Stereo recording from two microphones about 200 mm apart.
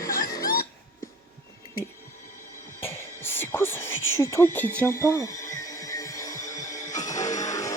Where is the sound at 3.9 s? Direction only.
80° left.